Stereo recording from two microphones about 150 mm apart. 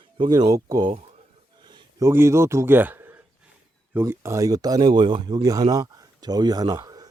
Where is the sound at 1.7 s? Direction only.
30° right (ahead or behind).